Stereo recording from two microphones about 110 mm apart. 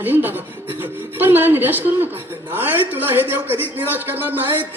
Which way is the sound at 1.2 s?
20° right (ahead or behind).